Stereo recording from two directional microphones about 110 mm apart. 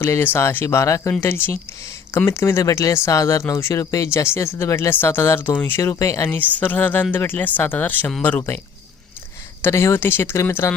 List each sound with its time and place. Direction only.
0.0 s speech: 20° left (ahead or behind)
6.2 s speech: 15° left (ahead or behind)
9.6 s speech: 20° left (ahead or behind)